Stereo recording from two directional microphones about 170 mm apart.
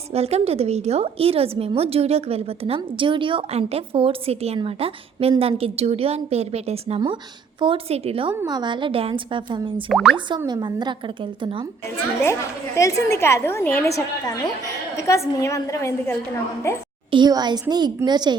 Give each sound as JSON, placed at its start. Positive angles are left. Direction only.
{"t": 0.1, "sound": "a woman's voice", "side_deg": -40}
{"t": 9.9, "sound": "speech", "side_deg": 0}
{"t": 10.2, "sound": "a woman's voice", "side_deg": -25}
{"t": 12.2, "sound": "a woman's voice", "side_deg": 15}
{"t": 17.1, "sound": "a woman's voice", "side_deg": -25}